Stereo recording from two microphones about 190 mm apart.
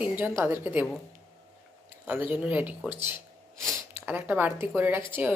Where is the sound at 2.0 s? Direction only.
10° right (ahead or behind).